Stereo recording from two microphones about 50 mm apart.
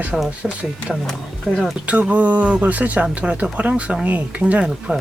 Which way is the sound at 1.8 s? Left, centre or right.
Right.